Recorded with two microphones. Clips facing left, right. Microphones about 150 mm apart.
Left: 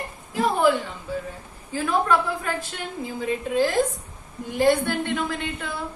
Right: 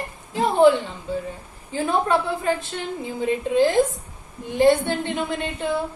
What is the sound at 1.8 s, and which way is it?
A woman's voice, 25° right (ahead or behind).